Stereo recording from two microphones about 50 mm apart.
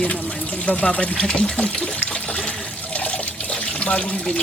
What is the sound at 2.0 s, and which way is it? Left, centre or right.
Water, left.